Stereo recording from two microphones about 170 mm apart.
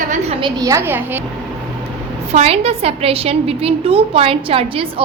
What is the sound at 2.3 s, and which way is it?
A woman's voice, 40° right (ahead or behind).